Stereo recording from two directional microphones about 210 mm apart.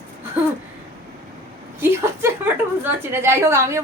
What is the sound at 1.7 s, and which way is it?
A woman's voice, 10° right (ahead or behind).